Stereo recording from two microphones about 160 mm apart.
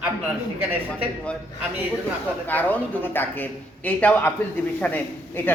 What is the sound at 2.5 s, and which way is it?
A man's voice, 10° left (ahead or behind).